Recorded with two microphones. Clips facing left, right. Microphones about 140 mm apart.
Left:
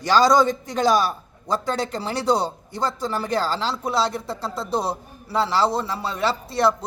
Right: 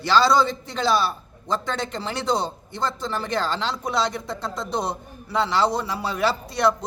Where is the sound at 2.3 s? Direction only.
10° left (ahead or behind).